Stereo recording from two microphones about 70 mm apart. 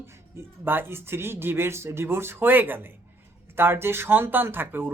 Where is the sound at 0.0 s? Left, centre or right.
Right.